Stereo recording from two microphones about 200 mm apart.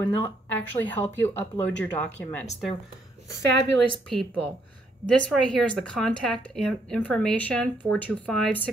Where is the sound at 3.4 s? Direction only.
60° right (ahead or behind).